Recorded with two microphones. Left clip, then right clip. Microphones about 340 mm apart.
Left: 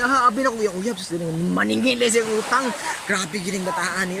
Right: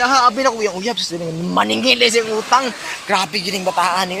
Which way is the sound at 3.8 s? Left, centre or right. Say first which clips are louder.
Right 8 dB; centre.